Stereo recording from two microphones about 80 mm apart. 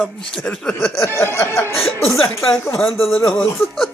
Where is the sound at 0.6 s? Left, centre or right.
Centre.